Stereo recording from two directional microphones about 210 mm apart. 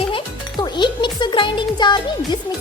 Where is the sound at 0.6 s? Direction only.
20° left (ahead or behind).